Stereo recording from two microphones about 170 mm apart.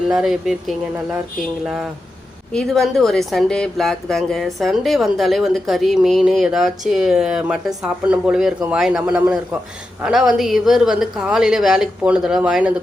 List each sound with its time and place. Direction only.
0.1 s speech: 5° right (ahead or behind)